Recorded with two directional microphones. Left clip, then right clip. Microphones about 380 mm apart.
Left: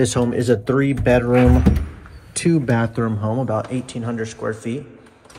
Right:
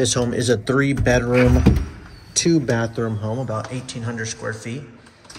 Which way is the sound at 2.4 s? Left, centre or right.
Left.